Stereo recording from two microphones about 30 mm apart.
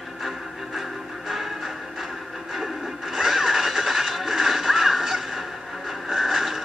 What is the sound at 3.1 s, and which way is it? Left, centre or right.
Music, centre.